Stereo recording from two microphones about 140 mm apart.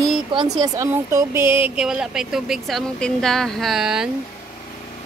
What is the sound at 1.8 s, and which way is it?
A woman's voice, 5° right (ahead or behind).